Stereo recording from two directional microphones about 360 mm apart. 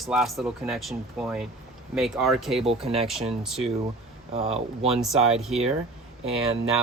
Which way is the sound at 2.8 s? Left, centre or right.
Centre.